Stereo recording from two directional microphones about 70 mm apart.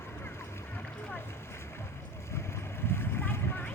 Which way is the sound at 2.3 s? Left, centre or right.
Left.